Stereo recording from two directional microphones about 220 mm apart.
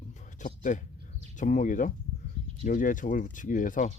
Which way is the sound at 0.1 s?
35° left (ahead or behind).